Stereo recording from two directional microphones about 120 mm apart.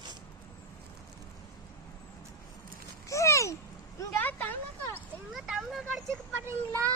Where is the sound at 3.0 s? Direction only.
25° left (ahead or behind).